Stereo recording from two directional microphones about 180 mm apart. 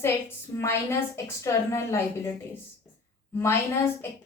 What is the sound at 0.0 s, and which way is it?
A woman's voice, 15° left (ahead or behind).